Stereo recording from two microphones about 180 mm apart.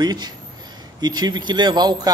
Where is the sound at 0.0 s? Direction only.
20° right (ahead or behind).